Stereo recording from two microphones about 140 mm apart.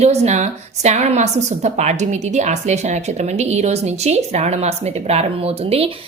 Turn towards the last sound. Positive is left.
turn(degrees=-45)  # may be behind; listen again after turning